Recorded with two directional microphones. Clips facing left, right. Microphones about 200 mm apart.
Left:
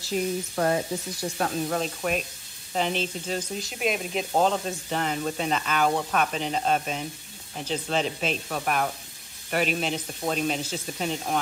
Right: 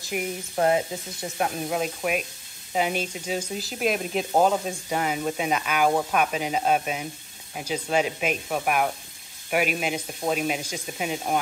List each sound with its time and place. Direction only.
0.0 s speech: 15° right (ahead or behind)